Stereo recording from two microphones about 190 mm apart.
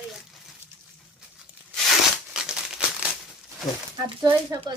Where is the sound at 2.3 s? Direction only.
5° right (ahead or behind).